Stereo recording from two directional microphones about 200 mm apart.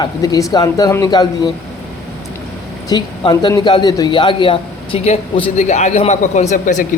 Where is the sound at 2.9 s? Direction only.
20° left (ahead or behind).